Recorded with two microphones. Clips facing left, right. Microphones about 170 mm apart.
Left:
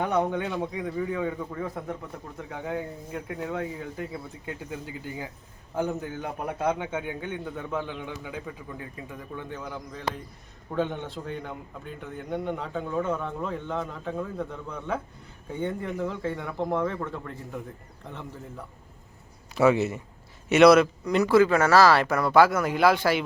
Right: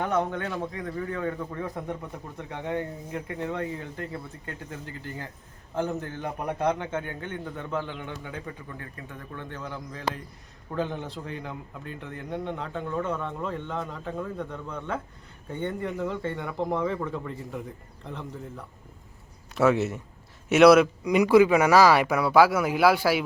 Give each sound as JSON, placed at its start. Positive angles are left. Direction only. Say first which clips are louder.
{"t": 0.0, "sound": "a man's voice", "louder": "left 1 dB", "side_deg": 10}